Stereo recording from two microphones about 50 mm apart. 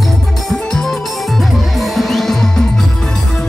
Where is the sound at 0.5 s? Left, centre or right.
Centre.